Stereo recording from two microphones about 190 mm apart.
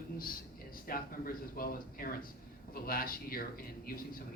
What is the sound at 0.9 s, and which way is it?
A man's voice, 50° left (ahead or behind).